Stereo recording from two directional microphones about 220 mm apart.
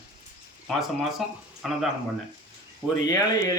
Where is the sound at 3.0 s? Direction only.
15° left (ahead or behind).